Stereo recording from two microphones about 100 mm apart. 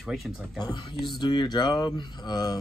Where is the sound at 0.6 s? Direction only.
45° left (ahead or behind).